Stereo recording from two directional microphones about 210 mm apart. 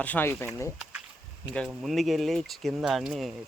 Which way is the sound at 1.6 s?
Centre (ahead or behind).